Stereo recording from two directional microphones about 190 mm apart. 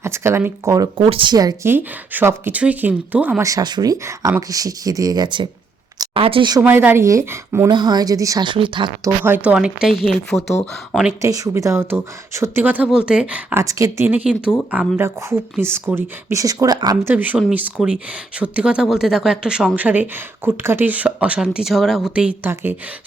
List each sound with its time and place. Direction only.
0.0 s speech: 15° right (ahead or behind)
6.6 s speech: 10° right (ahead or behind); by 8.9 s 25° right (ahead or behind)
9.2 s speech: 10° right (ahead or behind)
11.2 s speech: 15° right (ahead or behind)
17.1 s speech: 10° right (ahead or behind)